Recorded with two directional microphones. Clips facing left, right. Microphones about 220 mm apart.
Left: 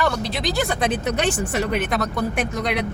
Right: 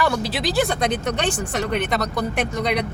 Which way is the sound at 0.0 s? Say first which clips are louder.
Right 1 dB; 5° right (ahead or behind).